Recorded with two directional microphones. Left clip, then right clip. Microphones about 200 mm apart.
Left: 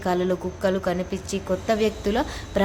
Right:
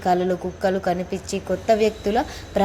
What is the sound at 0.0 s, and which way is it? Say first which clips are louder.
A woman's voice: right 3 dB; 5° right (ahead or behind).